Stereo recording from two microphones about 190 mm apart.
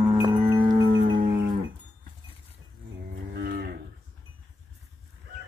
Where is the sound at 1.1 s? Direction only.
55° right (ahead or behind).